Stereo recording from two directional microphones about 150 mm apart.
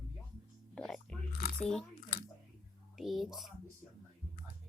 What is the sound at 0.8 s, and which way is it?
Crunch, 5° left (ahead or behind).